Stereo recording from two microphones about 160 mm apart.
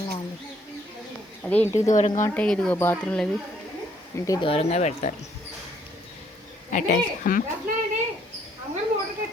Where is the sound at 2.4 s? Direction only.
5° left (ahead or behind).